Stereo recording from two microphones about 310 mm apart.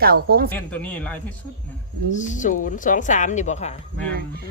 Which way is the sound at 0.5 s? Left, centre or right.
Centre.